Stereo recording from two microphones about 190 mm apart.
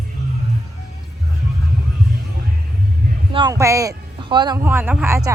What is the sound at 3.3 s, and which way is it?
Heart sounds, 20° right (ahead or behind).